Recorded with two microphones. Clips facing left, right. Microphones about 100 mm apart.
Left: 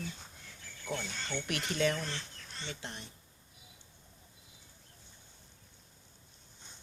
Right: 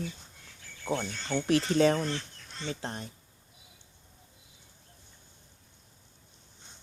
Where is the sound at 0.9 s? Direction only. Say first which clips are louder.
Right 7 dB; 30° right (ahead or behind).